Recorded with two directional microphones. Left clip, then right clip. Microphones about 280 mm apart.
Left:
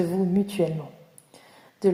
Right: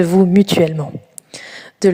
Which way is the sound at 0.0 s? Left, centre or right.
Right.